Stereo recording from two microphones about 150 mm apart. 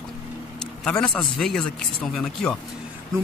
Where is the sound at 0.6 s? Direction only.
5° left (ahead or behind).